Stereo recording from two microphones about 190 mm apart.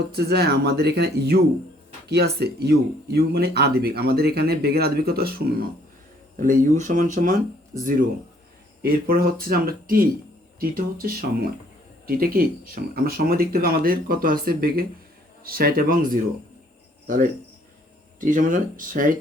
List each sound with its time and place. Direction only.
0.1 s speech: 55° right (ahead or behind)
8.8 s speech: 50° right (ahead or behind)
17.1 s speech: 45° right (ahead or behind)